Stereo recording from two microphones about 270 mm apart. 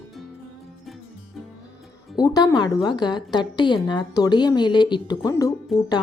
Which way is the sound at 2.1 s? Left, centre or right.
Centre.